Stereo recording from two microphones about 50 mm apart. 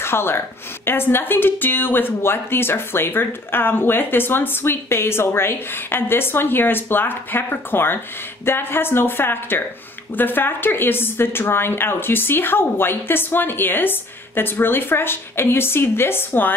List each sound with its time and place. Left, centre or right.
0.0 s a woman's voice: left